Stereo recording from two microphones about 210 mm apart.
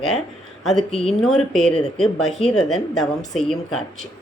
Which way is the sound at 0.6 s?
Centre (ahead or behind).